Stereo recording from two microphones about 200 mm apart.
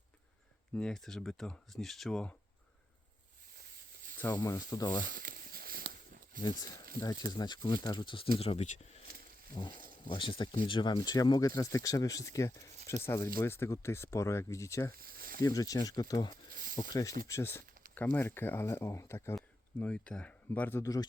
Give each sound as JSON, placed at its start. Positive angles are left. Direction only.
{"t": 0.7, "sound": "speech", "side_deg": 5}
{"t": 4.4, "sound": "speech", "side_deg": 15}
{"t": 5.0, "sound": "a sound", "side_deg": -45}
{"t": 6.4, "sound": "speech", "side_deg": 20}
{"t": 14.9, "sound": "snake", "side_deg": -45}
{"t": 15.4, "sound": "speech", "side_deg": 15}